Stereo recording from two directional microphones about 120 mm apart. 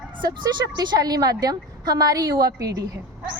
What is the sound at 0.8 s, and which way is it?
Speech, 35° right (ahead or behind).